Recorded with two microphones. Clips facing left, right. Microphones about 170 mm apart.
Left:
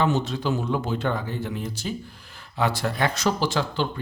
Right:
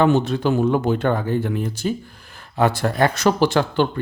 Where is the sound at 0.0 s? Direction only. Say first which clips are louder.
Right 6 dB; 55° right (ahead or behind).